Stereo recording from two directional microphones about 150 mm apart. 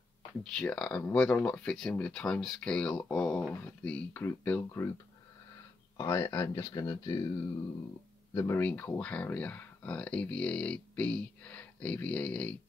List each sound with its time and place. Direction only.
0.4 s speech: 5° left (ahead or behind)
5.9 s speech: 20° left (ahead or behind)
8.4 s speech: 15° left (ahead or behind)